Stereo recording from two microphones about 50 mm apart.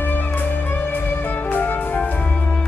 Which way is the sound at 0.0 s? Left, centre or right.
Left.